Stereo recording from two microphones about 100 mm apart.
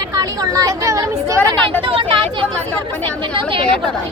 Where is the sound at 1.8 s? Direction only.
60° right (ahead or behind).